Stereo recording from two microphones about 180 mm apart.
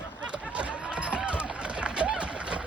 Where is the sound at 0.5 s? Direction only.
5° right (ahead or behind).